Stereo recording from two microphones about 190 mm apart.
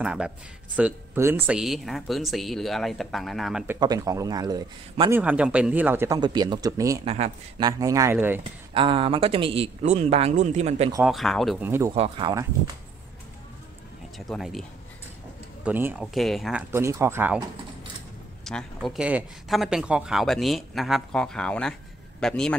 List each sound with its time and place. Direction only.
0.0 s speech: 5° right (ahead or behind)
3.8 s a man's voice: 20° right (ahead or behind)
5.1 s speech: 10° right (ahead or behind)
8.7 s speech: 30° right (ahead or behind)
11.1 s speech: centre (ahead or behind)
11.6 s speech: 10° right (ahead or behind)
11.9 s a man's voice: 30° right (ahead or behind)
14.1 s speech: centre (ahead or behind)
15.6 s speech: 10° right (ahead or behind)
16.7 s speech: 15° right (ahead or behind)
18.4 s speech: centre (ahead or behind)